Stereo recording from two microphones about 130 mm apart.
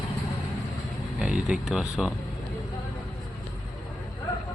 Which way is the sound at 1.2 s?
5° right (ahead or behind).